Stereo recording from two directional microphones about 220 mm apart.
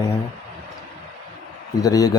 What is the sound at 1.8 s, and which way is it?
Speech, 15° left (ahead or behind).